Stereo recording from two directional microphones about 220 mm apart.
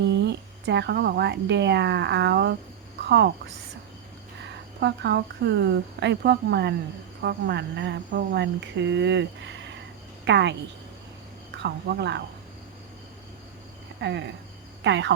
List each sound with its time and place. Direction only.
0.0 s a woman's voice: 50° right (ahead or behind)
4.4 s a woman's voice: 50° right (ahead or behind)
11.5 s a woman's voice: 50° right (ahead or behind)
14.0 s a woman's voice: 50° right (ahead or behind)